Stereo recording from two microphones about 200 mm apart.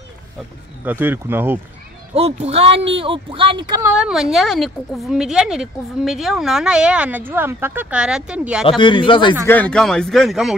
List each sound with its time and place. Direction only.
0.8 s speech: 10° right (ahead or behind)
2.1 s speech: 30° right (ahead or behind)
3.9 s speech: 5° right (ahead or behind)
8.6 s speech: 25° left (ahead or behind)
9.5 s speech: 5° left (ahead or behind)